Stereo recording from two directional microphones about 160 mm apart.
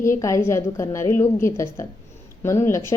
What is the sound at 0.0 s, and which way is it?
A woman's voice, 20° left (ahead or behind).